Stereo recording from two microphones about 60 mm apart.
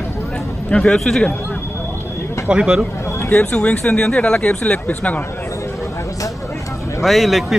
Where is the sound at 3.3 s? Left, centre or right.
Centre.